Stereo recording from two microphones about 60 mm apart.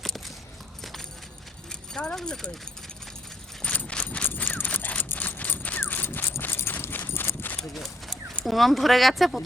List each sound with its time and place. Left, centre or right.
2.1 s speech: centre
3.6 s a sound: left
6.4 s clip-clop: left
8.4 s speech: centre